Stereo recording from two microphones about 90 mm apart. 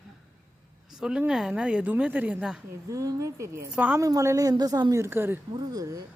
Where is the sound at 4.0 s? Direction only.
35° right (ahead or behind).